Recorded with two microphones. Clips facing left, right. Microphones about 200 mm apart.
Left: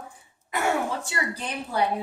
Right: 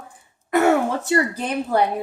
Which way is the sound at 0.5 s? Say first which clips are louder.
Right 8 dB; 60° right (ahead or behind).